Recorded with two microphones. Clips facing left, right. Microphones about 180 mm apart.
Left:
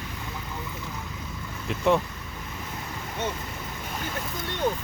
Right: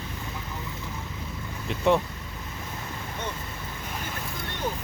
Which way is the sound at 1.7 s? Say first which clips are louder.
Even; centre (ahead or behind).